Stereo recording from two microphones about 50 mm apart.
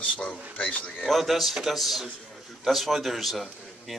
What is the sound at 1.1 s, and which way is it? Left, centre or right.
A man's voice, centre.